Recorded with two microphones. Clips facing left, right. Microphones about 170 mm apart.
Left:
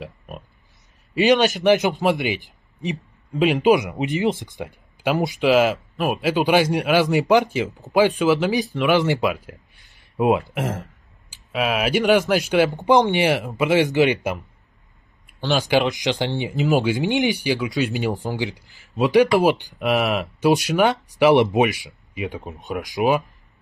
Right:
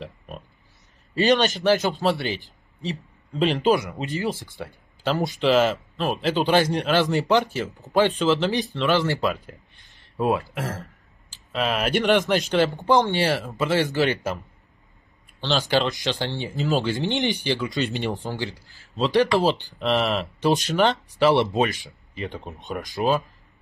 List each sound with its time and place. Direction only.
1.1 s a man's voice: 5° left (ahead or behind)
1.6 s a man's voice: 15° left (ahead or behind)
10.1 s a sound: 20° left (ahead or behind)
11.5 s a man's voice: 5° left (ahead or behind)
15.4 s a man's voice: 15° left (ahead or behind)
22.9 s a man's voice: 15° left (ahead or behind)